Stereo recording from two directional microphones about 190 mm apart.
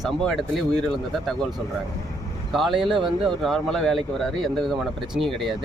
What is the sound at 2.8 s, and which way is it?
Speech, 25° right (ahead or behind).